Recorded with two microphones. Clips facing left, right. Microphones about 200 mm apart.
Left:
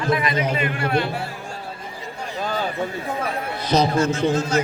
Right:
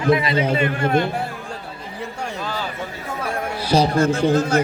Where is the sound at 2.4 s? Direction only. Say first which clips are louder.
Left 5 dB; 50° left (ahead or behind).